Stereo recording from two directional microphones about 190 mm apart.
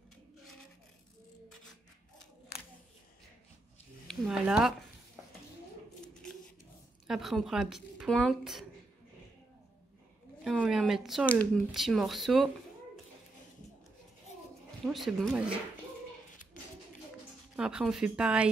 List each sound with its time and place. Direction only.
4.1 s a woman's voice: centre (ahead or behind)
7.1 s a woman's voice: centre (ahead or behind)
10.4 s a woman's voice: 5° right (ahead or behind)
14.9 s a woman's voice: centre (ahead or behind)
17.6 s a woman's voice: 5° right (ahead or behind)